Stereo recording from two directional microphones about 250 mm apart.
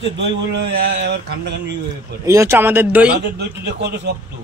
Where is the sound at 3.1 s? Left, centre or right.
Right.